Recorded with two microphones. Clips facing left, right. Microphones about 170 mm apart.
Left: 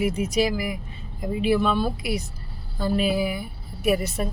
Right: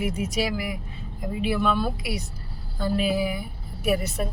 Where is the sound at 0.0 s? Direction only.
Centre (ahead or behind).